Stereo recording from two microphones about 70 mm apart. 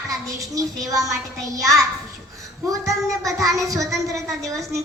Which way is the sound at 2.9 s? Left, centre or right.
Right.